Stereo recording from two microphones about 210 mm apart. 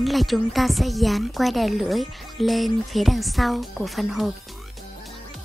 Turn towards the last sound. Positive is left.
turn(degrees=0)  # may be behind; listen again after turning